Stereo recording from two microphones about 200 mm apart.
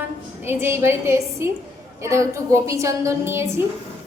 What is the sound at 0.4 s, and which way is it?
A woman's voice, 10° right (ahead or behind).